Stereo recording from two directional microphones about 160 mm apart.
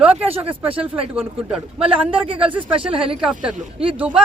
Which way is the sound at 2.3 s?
35° right (ahead or behind).